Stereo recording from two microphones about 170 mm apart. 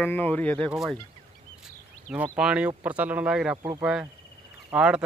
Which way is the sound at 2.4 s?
5° right (ahead or behind).